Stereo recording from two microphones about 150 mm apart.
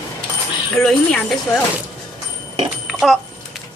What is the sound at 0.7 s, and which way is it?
Speech, 5° left (ahead or behind).